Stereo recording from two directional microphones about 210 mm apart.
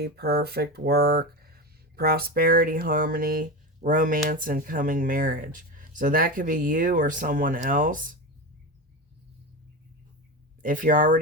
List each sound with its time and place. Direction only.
0.0 s speech: 45° right (ahead or behind)
10.6 s speech: 40° right (ahead or behind)